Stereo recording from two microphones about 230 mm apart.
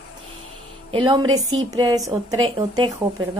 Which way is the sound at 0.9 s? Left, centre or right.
Centre.